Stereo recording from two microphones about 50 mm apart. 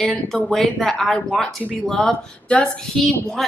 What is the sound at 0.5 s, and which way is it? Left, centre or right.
Speech, centre.